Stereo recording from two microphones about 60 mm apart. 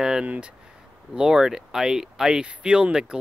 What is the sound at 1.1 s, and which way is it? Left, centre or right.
Speech, centre.